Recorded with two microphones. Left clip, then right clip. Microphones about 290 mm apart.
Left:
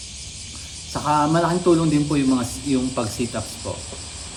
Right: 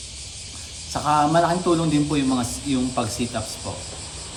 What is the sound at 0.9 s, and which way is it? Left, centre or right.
A man's voice, centre.